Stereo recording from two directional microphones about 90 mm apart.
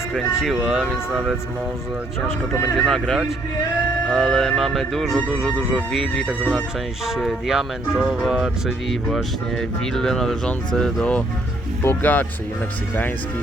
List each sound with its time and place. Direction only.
0.1 s speech: 5° right (ahead or behind)
2.7 s speech: 5° left (ahead or behind)
11.8 s speech: 20° left (ahead or behind)